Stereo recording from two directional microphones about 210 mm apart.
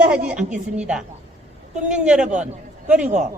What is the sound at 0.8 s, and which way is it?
A man's voice, 5° right (ahead or behind).